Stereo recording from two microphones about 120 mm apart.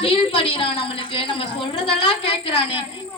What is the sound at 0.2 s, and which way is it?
Speech, 50° left (ahead or behind).